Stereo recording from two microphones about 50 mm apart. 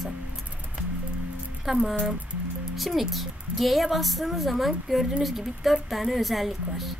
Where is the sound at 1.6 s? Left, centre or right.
Centre.